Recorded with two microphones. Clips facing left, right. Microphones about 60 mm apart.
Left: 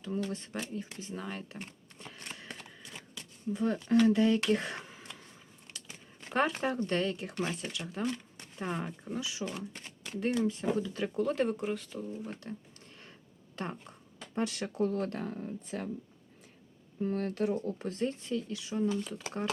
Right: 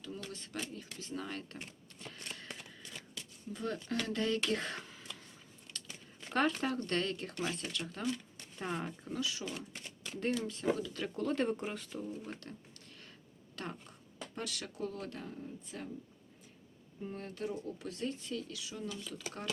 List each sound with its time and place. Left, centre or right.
0.3 s speech: left
1.1 s speech: centre
2.0 s a sound: centre
3.5 s speech: centre
4.1 s speech: centre
4.9 s throat clearing: left
6.2 s a sound: centre
6.6 s speech: centre
11.0 s speech: centre
12.4 s speech: centre; by 15.9 s left
17.0 s speech: left
19.1 s speech: left